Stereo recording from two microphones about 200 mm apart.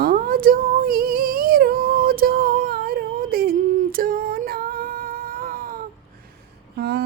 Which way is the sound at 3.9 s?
45° right (ahead or behind).